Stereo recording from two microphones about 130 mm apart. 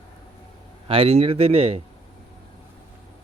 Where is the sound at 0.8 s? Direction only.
45° right (ahead or behind).